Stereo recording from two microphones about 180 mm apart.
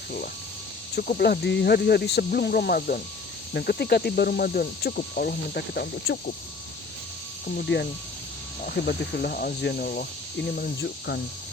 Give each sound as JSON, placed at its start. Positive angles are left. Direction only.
{"t": 0.9, "sound": "speech", "side_deg": 55}
{"t": 7.4, "sound": "speech", "side_deg": 60}
{"t": 10.8, "sound": "speech", "side_deg": 70}